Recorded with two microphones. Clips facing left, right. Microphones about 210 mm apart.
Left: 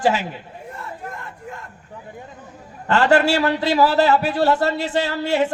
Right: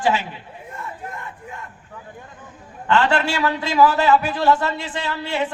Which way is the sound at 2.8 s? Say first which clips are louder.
Left 3 dB; 40° left (ahead or behind).